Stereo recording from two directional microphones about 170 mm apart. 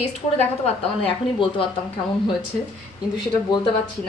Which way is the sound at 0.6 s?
30° left (ahead or behind).